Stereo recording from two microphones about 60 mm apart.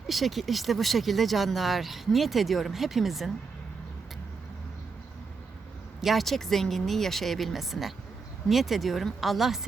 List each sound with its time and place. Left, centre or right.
0.1 s speech: centre
6.0 s speech: centre